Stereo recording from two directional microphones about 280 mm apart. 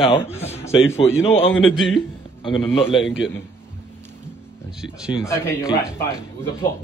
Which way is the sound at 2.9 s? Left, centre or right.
Left.